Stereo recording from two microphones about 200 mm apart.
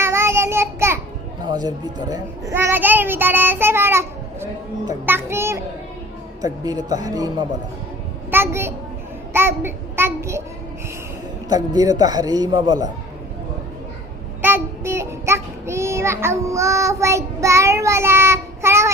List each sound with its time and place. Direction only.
0.0 s child singing: 15° right (ahead or behind)
1.5 s a child's voice: 20° right (ahead or behind)
9.3 s child singing: 10° right (ahead or behind)
11.4 s a man's voice: 20° right (ahead or behind)
14.4 s child singing: 10° right (ahead or behind)